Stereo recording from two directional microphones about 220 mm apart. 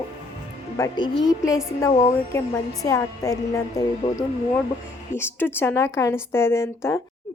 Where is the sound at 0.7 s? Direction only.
15° left (ahead or behind).